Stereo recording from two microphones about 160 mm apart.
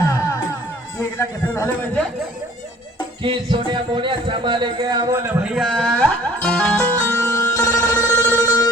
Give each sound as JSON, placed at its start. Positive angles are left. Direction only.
{"t": 1.5, "sound": "speech", "side_deg": 15}
{"t": 3.2, "sound": "speech", "side_deg": -30}
{"t": 5.4, "sound": "speech", "side_deg": -5}
{"t": 6.4, "sound": "music", "side_deg": 5}